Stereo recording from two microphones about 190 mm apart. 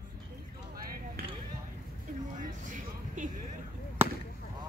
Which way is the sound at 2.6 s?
40° right (ahead or behind).